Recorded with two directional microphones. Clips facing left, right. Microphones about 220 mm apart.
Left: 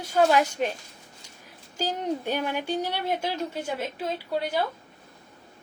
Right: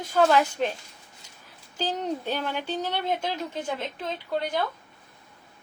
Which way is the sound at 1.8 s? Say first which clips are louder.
Left 1 dB; 10° left (ahead or behind).